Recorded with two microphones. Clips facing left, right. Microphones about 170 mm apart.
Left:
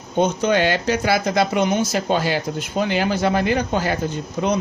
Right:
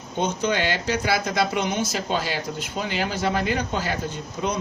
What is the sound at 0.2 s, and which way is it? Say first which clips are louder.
Speech: left 6 dB; 50° left (ahead or behind).